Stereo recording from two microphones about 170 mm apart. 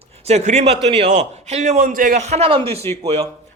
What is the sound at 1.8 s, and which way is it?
A man's voice, 55° right (ahead or behind).